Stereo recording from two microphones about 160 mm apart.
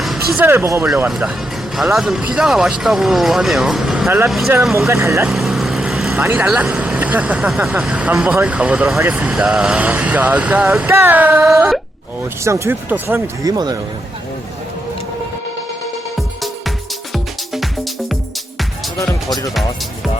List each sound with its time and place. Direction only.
0.0 s a sound: centre (ahead or behind)
0.4 s speech: 15° right (ahead or behind)
1.0 s speech: 5° right (ahead or behind)
4.9 s speech: 20° right (ahead or behind)
5.3 s speech: centre (ahead or behind)
12.5 s speech: 15° right (ahead or behind)
13.4 s speech: 25° right (ahead or behind)